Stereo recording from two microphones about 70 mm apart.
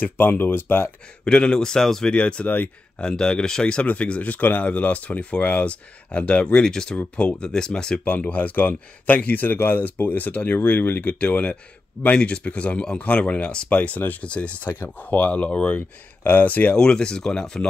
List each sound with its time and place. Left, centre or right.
0.0 s speech: left
1.2 s speech: centre
8.0 s speech: left
16.7 s speech: centre